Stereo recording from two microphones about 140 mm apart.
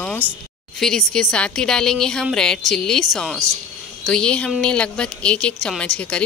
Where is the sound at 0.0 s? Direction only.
10° left (ahead or behind).